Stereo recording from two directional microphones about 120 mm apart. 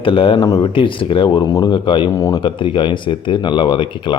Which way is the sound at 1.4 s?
30° left (ahead or behind).